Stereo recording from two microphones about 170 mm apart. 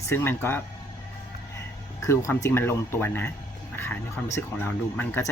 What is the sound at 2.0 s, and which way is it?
Speech, 20° left (ahead or behind).